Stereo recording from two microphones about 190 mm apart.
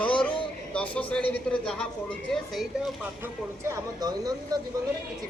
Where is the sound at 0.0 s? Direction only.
5° left (ahead or behind).